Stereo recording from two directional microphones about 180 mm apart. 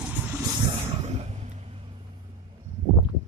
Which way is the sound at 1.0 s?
40° right (ahead or behind).